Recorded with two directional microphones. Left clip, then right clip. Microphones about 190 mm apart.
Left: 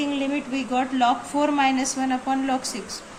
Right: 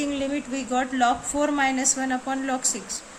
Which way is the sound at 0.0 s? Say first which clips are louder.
Left 1 dB; 50° right (ahead or behind).